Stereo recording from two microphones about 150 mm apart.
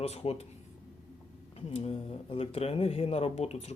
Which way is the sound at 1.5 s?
40° left (ahead or behind).